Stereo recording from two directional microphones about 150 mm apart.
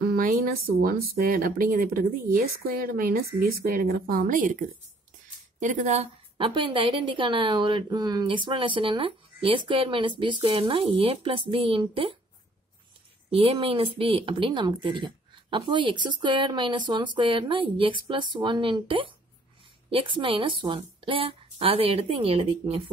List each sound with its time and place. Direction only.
0.0 s speech: 75° right (ahead or behind); by 6.0 s 55° right (ahead or behind)
6.3 s speech: 35° right (ahead or behind)
13.3 s speech: 40° right (ahead or behind)